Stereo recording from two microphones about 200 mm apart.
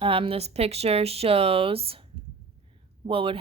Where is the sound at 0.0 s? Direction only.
25° right (ahead or behind).